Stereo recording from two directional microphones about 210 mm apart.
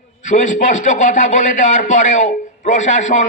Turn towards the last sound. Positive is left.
turn(degrees=35)  # may be behind; listen again after turning